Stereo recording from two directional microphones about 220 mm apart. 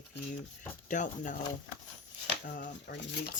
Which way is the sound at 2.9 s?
50° left (ahead or behind).